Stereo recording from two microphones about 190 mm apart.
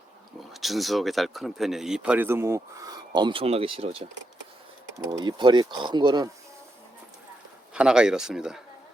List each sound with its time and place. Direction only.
0.3 s speech: centre (ahead or behind); by 6.2 s 25° right (ahead or behind)
7.7 s speech: 5° right (ahead or behind)